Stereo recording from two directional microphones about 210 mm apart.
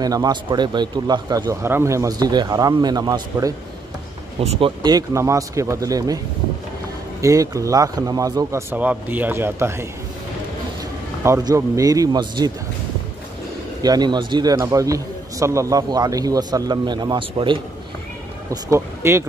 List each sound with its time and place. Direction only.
0.0 s speech: 20° right (ahead or behind)
4.4 s speech: 25° right (ahead or behind)
7.2 s speech: 15° right (ahead or behind)
11.2 s speech: 15° right (ahead or behind)
13.8 s a man's voice: 20° right (ahead or behind)